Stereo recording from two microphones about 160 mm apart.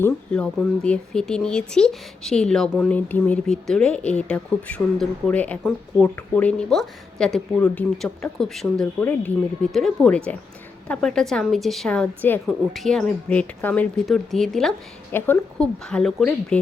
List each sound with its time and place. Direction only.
0.0 s speech: 5° left (ahead or behind)
14.0 s speech: centre (ahead or behind)